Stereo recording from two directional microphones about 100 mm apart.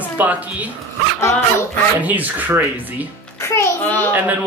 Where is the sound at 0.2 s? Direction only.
15° right (ahead or behind).